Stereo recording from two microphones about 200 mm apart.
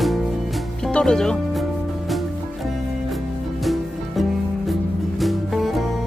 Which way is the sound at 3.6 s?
Centre (ahead or behind).